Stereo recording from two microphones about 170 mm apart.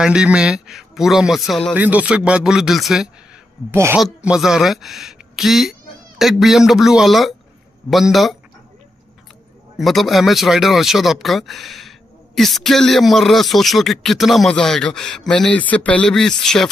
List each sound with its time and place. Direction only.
0.0 s speech: 5° right (ahead or behind)
3.7 s speech: 15° right (ahead or behind)
4.0 s speech: 5° right (ahead or behind)
9.8 s speech: centre (ahead or behind)